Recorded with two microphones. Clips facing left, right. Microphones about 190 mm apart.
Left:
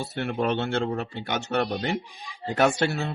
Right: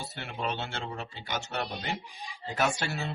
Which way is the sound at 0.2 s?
60° left (ahead or behind).